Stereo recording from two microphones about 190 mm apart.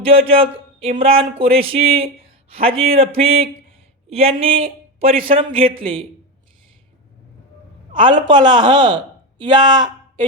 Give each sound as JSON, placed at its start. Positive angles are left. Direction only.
{"t": 0.1, "sound": "a man's voice", "side_deg": -30}
{"t": 7.9, "sound": "speech", "side_deg": -25}